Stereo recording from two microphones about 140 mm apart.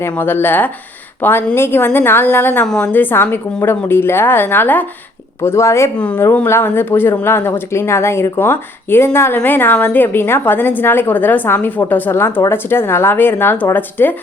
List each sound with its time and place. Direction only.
0.0 s speech: 15° left (ahead or behind)